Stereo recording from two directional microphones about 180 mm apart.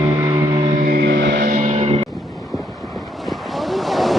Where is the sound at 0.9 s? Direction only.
65° right (ahead or behind); by 2.0 s 35° right (ahead or behind).